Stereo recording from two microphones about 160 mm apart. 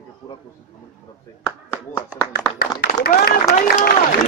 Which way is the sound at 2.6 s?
70° left (ahead or behind).